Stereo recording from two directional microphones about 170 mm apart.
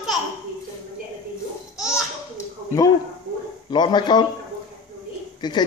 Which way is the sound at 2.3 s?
20° left (ahead or behind).